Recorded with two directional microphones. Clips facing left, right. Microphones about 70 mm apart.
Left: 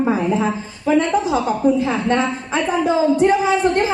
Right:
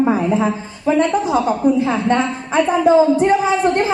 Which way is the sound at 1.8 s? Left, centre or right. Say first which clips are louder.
Right 2 dB; right.